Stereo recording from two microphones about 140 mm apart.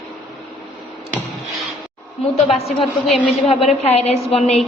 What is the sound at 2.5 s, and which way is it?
A woman's voice, 45° left (ahead or behind).